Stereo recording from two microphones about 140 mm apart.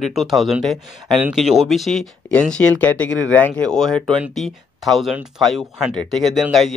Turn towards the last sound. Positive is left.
turn(degrees=0)  # may be behind; listen again after turning